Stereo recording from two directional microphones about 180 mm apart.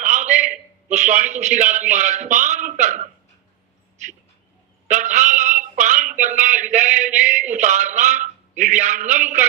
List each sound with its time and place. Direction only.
0.0 s a man's voice: 45° right (ahead or behind)
4.9 s speech: 45° right (ahead or behind)